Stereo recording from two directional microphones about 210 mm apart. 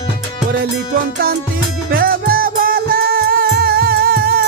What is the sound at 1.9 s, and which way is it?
Music, 45° right (ahead or behind).